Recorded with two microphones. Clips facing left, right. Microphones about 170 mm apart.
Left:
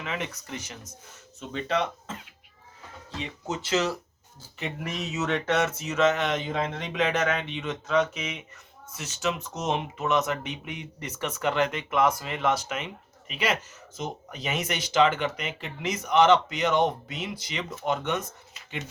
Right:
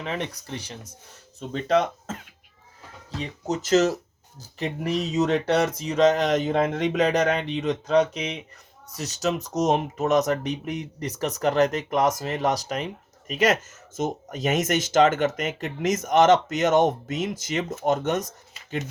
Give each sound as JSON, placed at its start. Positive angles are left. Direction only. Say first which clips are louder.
{"t": 0.0, "sound": "speech", "louder": "right 3 dB", "side_deg": -35}
{"t": 3.2, "sound": "speech", "louder": "right 5 dB", "side_deg": -40}